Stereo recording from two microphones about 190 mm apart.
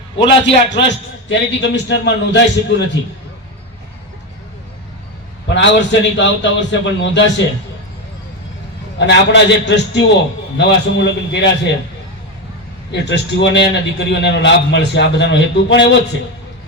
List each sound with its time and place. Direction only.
0.7 s a man's voice: 70° left (ahead or behind)
5.5 s a man's voice: 70° left (ahead or behind)
9.0 s a man's voice: 65° left (ahead or behind)
12.9 s a man's voice: 65° left (ahead or behind)